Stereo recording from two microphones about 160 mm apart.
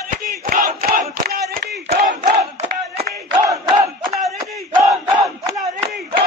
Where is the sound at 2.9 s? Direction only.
40° right (ahead or behind).